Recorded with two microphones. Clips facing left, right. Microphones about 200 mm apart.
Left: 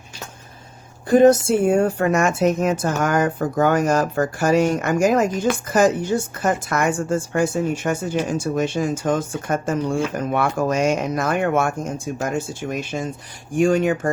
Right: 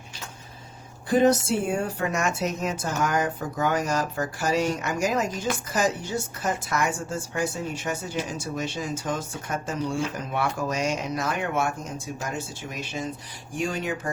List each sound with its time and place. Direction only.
1.2 s a woman's voice: 50° left (ahead or behind)